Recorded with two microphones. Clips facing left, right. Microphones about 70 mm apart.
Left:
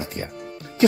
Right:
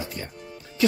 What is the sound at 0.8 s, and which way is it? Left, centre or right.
Music, left.